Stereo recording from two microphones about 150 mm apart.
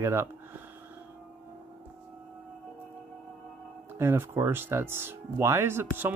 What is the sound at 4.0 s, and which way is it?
Speech, 15° right (ahead or behind).